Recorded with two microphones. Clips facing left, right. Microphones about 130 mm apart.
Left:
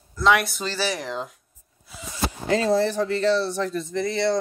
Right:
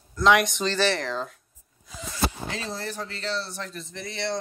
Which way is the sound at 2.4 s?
65° left (ahead or behind).